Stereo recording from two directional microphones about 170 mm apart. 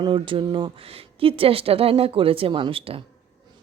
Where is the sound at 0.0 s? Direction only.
30° right (ahead or behind).